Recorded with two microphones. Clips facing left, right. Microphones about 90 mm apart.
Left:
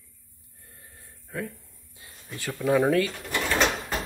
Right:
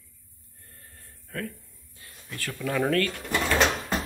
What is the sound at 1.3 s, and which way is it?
Speech, 15° left (ahead or behind).